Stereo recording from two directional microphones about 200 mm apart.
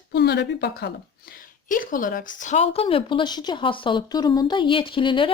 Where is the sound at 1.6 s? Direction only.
40° left (ahead or behind); by 5.3 s 25° left (ahead or behind).